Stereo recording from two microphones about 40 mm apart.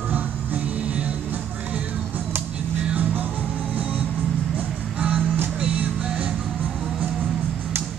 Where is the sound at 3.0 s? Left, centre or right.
Right.